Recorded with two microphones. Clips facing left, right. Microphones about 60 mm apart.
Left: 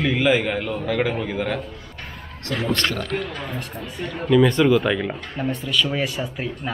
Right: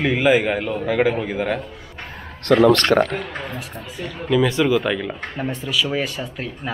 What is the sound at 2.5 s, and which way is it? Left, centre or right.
Speech, right.